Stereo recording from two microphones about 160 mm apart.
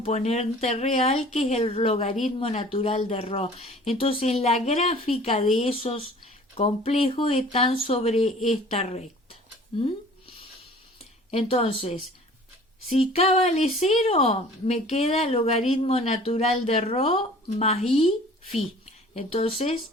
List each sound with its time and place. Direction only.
0.0 s a woman's voice: 45° left (ahead or behind)
11.3 s a woman's voice: 40° left (ahead or behind)
19.1 s a woman's voice: 35° left (ahead or behind)